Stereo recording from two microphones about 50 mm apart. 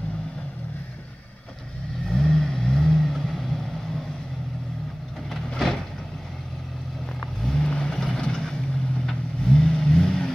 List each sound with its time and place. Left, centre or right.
2.0 s vehicle: centre
7.5 s vehicle: centre
7.9 s vehicle: centre